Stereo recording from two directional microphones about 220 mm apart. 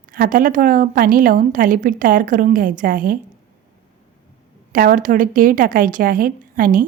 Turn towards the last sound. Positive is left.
turn(degrees=-40)  # may be behind; listen again after turning